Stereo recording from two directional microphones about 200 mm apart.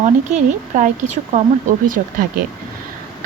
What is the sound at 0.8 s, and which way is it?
Speech, 35° right (ahead or behind).